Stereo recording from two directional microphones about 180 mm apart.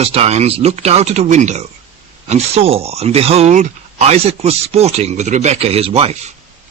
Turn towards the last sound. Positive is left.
turn(degrees=-30)  # may be behind; listen again after turning